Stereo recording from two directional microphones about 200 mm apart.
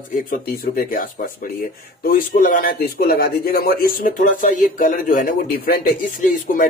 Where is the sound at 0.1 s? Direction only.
45° left (ahead or behind).